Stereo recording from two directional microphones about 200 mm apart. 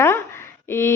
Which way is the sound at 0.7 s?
10° left (ahead or behind).